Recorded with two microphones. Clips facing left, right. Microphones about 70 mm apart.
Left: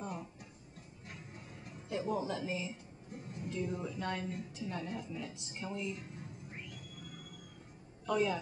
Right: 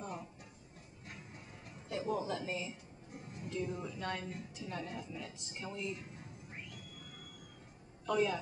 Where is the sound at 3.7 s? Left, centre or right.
Centre.